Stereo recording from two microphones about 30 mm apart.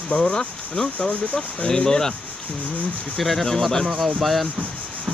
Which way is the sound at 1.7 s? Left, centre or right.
Centre.